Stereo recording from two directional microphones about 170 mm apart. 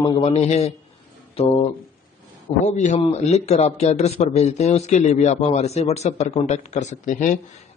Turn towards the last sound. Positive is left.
turn(degrees=45)  # may be behind; listen again after turning